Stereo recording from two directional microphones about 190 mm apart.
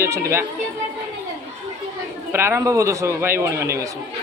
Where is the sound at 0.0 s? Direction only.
15° right (ahead or behind).